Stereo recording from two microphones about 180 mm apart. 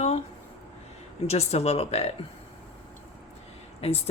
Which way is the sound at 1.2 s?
35° left (ahead or behind).